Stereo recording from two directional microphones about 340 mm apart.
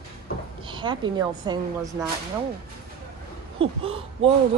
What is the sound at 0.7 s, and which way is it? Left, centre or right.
Speech, centre.